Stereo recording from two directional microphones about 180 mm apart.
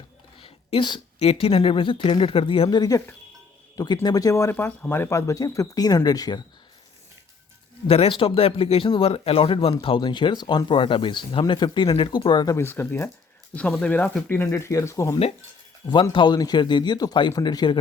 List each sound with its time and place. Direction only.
0.3 s a woman's voice: 30° left (ahead or behind)
7.9 s speech: 30° left (ahead or behind)